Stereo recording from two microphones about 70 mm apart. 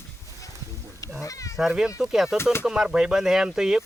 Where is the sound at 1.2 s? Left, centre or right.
Left.